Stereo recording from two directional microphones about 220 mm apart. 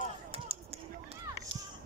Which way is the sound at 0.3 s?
30° right (ahead or behind).